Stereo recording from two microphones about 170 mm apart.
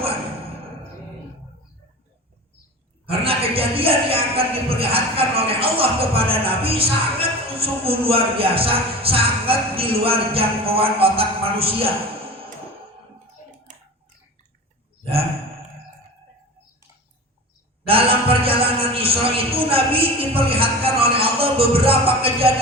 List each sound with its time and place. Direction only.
3.1 s speech: 35° right (ahead or behind)
17.8 s speech: 35° right (ahead or behind)